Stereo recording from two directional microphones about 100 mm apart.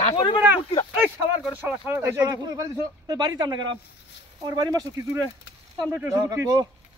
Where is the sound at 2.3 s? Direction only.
35° right (ahead or behind).